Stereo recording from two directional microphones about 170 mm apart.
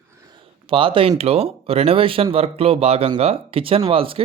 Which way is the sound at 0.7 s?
30° right (ahead or behind).